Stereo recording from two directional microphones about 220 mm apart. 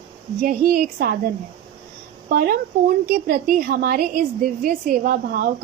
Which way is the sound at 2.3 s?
45° right (ahead or behind).